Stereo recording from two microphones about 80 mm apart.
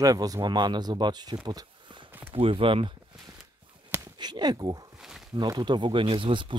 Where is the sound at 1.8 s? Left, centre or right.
Right.